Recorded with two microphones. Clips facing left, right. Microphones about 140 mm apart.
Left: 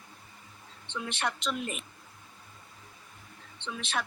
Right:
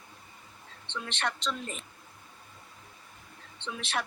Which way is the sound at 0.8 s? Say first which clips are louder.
Left 1 dB; 10° left (ahead or behind).